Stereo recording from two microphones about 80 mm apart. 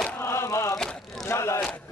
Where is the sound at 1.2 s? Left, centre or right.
Left.